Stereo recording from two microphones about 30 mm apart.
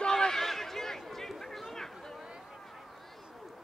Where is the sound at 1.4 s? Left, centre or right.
Centre.